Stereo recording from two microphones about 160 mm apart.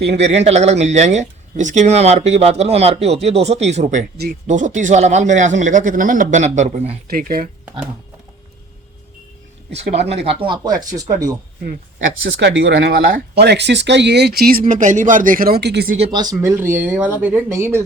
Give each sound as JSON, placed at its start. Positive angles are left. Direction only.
{"t": 0.2, "sound": "speech", "side_deg": -45}
{"t": 7.1, "sound": "speech", "side_deg": -65}
{"t": 9.9, "sound": "speech", "side_deg": -40}
{"t": 11.6, "sound": "speech", "side_deg": -80}
{"t": 16.1, "sound": "speech", "side_deg": -20}